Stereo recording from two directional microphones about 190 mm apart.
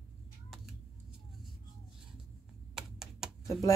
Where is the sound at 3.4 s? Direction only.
15° left (ahead or behind).